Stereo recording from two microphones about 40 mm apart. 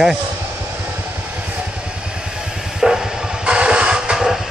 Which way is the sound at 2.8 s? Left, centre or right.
Centre.